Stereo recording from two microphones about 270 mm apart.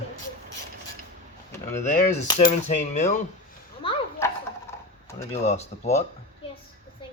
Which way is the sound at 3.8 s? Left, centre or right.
Centre.